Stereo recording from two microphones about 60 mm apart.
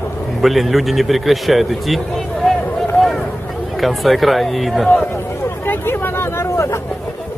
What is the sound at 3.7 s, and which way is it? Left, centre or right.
A man's voice, centre.